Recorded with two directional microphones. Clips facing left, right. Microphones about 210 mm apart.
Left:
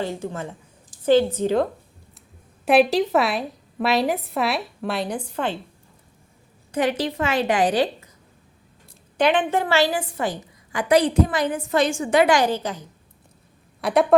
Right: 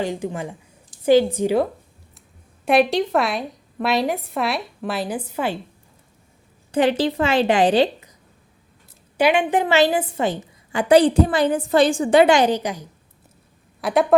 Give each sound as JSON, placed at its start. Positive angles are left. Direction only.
{"t": 0.0, "sound": "a woman's voice", "side_deg": -15}
{"t": 2.6, "sound": "a woman's voice", "side_deg": 0}
{"t": 6.7, "sound": "a woman's voice", "side_deg": -30}
{"t": 9.1, "sound": "a woman's voice", "side_deg": -10}
{"t": 13.8, "sound": "a woman's voice", "side_deg": 0}